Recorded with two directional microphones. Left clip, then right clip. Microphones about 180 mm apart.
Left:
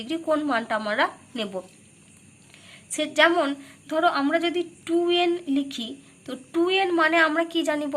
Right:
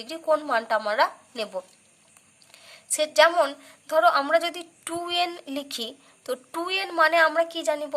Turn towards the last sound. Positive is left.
turn(degrees=-25)  # may be behind; listen again after turning